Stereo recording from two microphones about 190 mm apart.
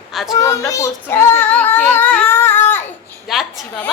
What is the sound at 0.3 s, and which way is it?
Child singing, 15° left (ahead or behind).